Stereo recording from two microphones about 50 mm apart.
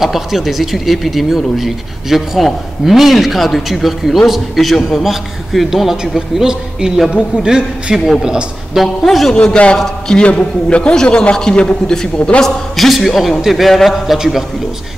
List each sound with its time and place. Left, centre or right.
0.0 s a man's voice: centre
8.7 s speech: centre
9.4 s a man's voice: left
12.4 s speech: centre